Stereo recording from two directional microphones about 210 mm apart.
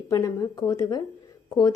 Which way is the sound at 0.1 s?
15° left (ahead or behind).